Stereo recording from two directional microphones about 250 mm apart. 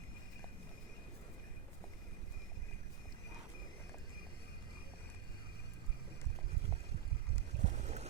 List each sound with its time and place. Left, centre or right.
7.6 s boat: right